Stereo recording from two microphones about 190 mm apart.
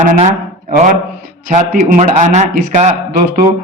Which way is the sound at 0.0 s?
40° right (ahead or behind).